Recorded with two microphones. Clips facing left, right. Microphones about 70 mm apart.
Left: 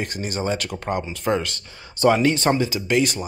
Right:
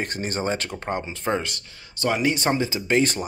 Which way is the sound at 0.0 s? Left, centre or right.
Right.